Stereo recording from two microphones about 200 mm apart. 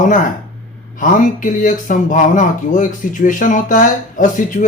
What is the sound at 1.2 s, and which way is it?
Speech, 40° left (ahead or behind).